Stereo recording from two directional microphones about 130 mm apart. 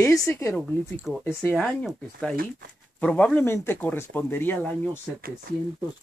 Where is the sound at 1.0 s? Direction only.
5° right (ahead or behind); by 4.8 s 15° left (ahead or behind).